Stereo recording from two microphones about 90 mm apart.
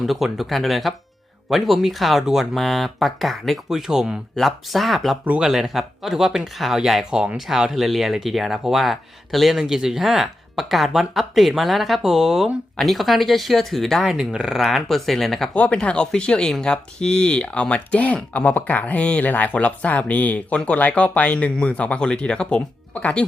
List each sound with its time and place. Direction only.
0.0 s speech: 5° right (ahead or behind)
5.2 s speech: 15° right (ahead or behind)
5.5 s speech: 5° right (ahead or behind)
15.5 s speech: 15° left (ahead or behind)